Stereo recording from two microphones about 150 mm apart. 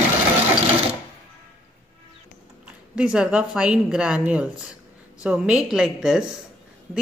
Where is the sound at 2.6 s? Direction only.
5° right (ahead or behind).